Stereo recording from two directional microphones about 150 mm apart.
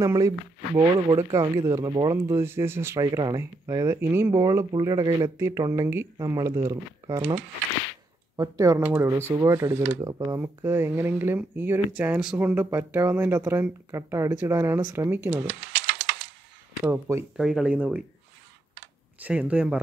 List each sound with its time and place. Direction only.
0.0 s speech: 20° right (ahead or behind)
3.0 s speech: 30° right (ahead or behind)
8.4 s speech: 20° right (ahead or behind)
8.8 s speech: 10° right (ahead or behind)
16.8 s speech: 15° right (ahead or behind)
17.4 s speech: centre (ahead or behind)
19.2 s speech: 10° right (ahead or behind)